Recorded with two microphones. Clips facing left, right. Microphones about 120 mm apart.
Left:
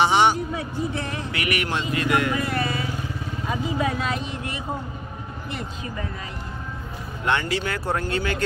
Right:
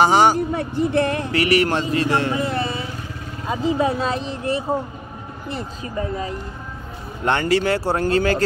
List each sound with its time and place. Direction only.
0.0 s speech: 40° right (ahead or behind)
0.5 s speech: 60° right (ahead or behind)
1.3 s speech: 35° right (ahead or behind)
7.6 s speech: 30° right (ahead or behind)